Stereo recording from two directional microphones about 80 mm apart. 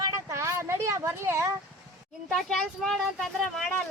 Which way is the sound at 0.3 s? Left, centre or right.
Right.